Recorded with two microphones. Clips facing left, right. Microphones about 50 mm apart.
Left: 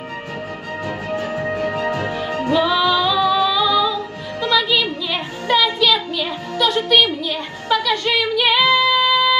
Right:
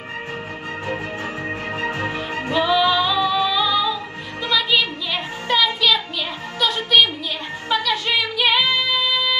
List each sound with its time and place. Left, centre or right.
1.5 s music: right
2.6 s music: centre
5.1 s music: centre
7.8 s a sound: centre
8.4 s female singing: centre
8.6 s music: left